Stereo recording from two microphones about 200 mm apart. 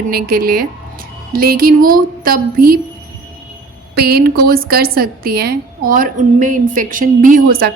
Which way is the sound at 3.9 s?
50° right (ahead or behind).